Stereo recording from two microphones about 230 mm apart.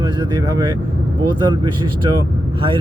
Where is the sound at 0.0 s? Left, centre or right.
Centre.